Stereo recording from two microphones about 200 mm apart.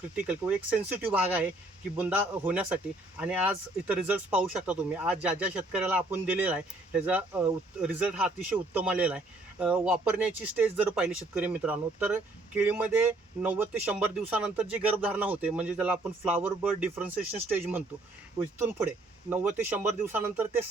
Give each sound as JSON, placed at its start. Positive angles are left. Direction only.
{"t": 0.2, "sound": "speech", "side_deg": -5}
{"t": 19.3, "sound": "speech", "side_deg": -10}